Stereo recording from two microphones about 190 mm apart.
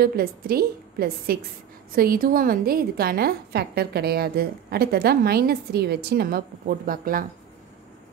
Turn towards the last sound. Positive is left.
turn(degrees=-45)  # may be behind; listen again after turning